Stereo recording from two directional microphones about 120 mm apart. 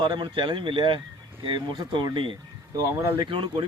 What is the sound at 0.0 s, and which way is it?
Speech, 45° right (ahead or behind).